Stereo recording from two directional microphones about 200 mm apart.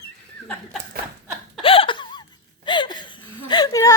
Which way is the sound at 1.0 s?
50° right (ahead or behind).